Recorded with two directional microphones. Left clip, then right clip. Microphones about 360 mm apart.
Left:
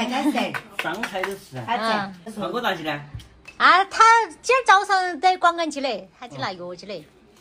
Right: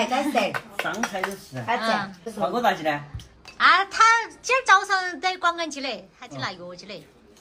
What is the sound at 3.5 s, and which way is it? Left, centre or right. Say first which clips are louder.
Speech: left 2 dB; centre.